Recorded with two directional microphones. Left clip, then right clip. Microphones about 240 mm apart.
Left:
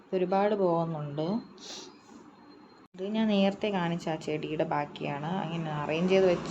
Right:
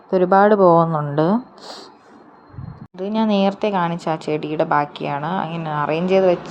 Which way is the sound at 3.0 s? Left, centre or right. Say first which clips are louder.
Right 10 dB; right.